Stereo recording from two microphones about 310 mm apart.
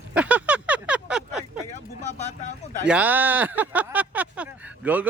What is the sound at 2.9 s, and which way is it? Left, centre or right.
Speech, centre.